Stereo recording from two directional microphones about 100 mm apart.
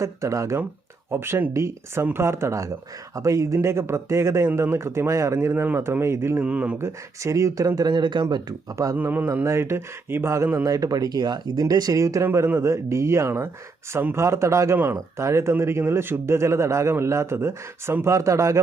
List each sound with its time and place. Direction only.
0.0 s speech: 30° right (ahead or behind)
6.4 s speech: 15° right (ahead or behind)
6.7 s speech: 30° right (ahead or behind)
7.8 s speech: 45° right (ahead or behind)
9.0 s speech: 20° right (ahead or behind)